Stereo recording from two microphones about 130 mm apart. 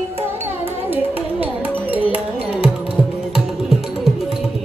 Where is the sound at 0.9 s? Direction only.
15° right (ahead or behind).